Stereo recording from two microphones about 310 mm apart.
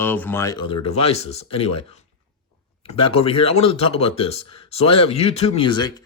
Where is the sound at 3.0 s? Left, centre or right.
Centre.